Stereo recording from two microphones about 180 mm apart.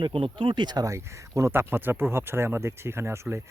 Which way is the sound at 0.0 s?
30° right (ahead or behind).